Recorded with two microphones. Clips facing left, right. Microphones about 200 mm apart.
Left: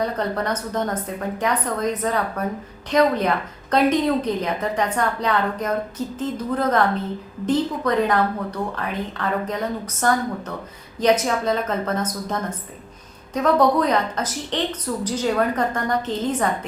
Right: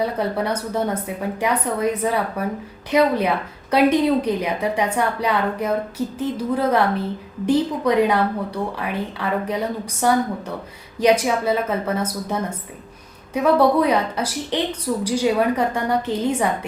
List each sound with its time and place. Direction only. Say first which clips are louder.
0.0 s a woman's voice: right 2 dB; 10° right (ahead or behind)